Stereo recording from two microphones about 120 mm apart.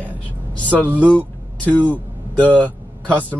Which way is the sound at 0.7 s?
10° left (ahead or behind).